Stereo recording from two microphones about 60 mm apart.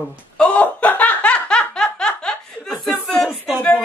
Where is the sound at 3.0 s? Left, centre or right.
Centre.